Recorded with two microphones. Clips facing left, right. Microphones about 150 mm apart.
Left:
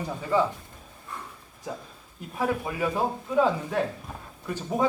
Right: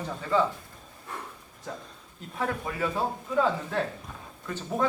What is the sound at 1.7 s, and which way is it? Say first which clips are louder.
A man's voice: left 3 dB; 5° left (ahead or behind).